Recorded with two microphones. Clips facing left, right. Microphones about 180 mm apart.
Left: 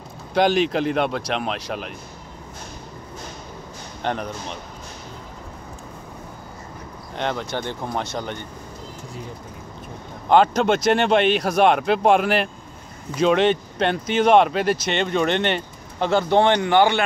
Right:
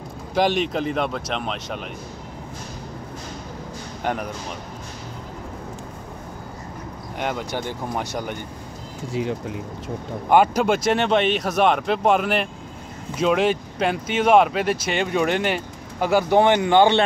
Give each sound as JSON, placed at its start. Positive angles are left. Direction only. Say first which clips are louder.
{"t": 0.3, "sound": "speech", "louder": "left 2 dB", "side_deg": 0}
{"t": 4.0, "sound": "speech", "louder": "even", "side_deg": -10}
{"t": 7.2, "sound": "speech", "louder": "left 1 dB", "side_deg": -10}
{"t": 9.1, "sound": "speech", "louder": "right 15 dB", "side_deg": -80}
{"t": 10.3, "sound": "speech", "louder": "left 1 dB", "side_deg": -10}
{"t": 16.6, "sound": "speech", "louder": "right 1 dB", "side_deg": -25}